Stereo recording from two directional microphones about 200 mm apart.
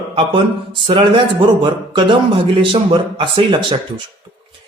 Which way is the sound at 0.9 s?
25° right (ahead or behind).